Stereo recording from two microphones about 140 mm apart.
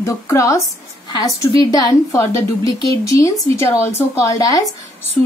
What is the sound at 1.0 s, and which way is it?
A woman's voice, 30° left (ahead or behind).